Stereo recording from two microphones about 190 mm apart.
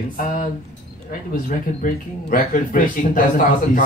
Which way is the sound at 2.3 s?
45° left (ahead or behind).